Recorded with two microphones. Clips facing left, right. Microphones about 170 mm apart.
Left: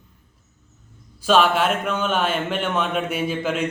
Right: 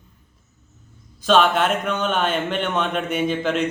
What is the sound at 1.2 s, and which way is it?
Speech, 5° left (ahead or behind).